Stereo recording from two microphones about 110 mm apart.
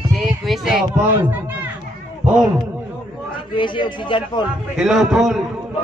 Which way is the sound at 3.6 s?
45° left (ahead or behind).